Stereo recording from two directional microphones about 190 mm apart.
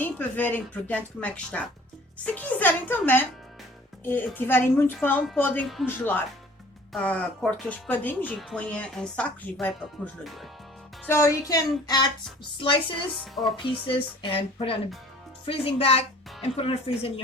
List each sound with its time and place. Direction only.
0.0 s speech: 10° left (ahead or behind)
11.0 s speech: 15° left (ahead or behind)
13.1 s speech: centre (ahead or behind)
13.7 s speech: 25° left (ahead or behind)